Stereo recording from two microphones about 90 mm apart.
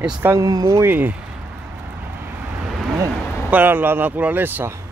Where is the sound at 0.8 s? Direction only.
20° right (ahead or behind).